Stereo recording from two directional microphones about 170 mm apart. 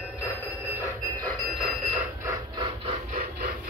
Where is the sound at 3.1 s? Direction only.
55° right (ahead or behind).